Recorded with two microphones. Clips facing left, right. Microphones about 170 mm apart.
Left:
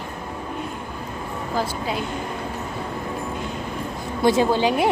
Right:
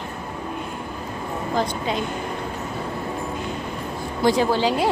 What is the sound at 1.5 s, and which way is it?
Speech, 5° left (ahead or behind).